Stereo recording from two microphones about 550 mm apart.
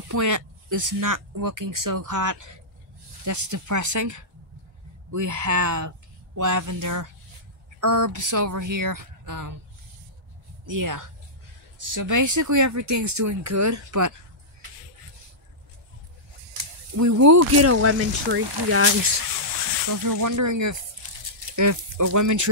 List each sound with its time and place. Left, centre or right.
0.1 s speech: right
10.6 s speech: right
16.9 s speech: right
19.9 s speech: right